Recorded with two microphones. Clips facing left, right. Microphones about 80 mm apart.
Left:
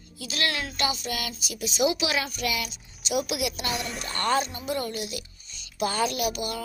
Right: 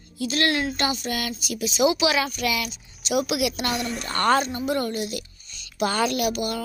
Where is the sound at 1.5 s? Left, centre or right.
Right.